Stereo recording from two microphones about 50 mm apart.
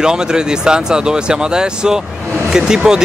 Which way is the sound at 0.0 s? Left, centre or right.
Centre.